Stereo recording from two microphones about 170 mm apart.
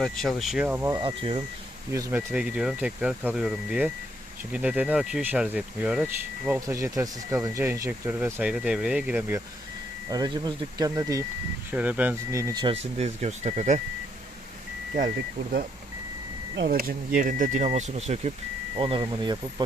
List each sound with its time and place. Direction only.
0.0 s speech: centre (ahead or behind)
1.0 s speech: 35° right (ahead or behind)
1.9 s speech: 15° right (ahead or behind)
6.7 s speech: 15° right (ahead or behind)
10.1 s speech: 25° right (ahead or behind)
11.7 s speech: 10° right (ahead or behind); by 13.8 s 45° right (ahead or behind)
16.6 s speech: 60° right (ahead or behind); by 18.3 s 40° right (ahead or behind)
18.8 s speech: 30° right (ahead or behind)